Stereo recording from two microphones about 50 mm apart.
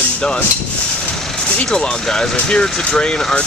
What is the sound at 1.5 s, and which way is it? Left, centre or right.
Speech, left.